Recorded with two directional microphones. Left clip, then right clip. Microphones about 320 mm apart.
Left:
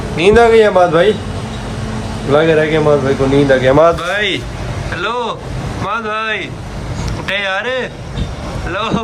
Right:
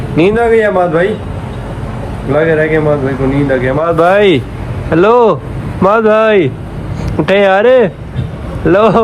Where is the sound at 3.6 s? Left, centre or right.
Left.